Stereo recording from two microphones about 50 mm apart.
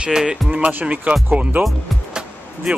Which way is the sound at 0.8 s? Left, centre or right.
Right.